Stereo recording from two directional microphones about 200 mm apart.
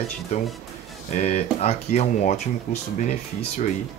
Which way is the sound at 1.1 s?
35° left (ahead or behind).